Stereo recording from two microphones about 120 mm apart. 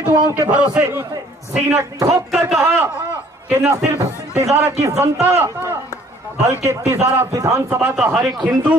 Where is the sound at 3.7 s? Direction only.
25° right (ahead or behind).